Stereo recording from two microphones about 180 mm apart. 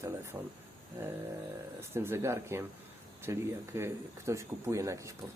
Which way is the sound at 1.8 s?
15° right (ahead or behind).